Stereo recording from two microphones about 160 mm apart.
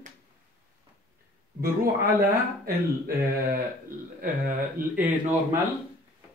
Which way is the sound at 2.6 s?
70° right (ahead or behind).